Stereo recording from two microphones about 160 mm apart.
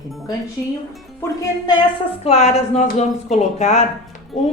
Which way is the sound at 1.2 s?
25° left (ahead or behind).